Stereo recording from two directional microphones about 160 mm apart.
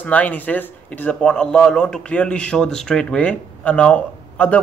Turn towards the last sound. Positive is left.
turn(degrees=10)  # may be behind; listen again after turning